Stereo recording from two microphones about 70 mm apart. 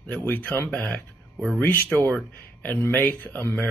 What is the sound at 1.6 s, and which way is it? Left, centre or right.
Speech, left.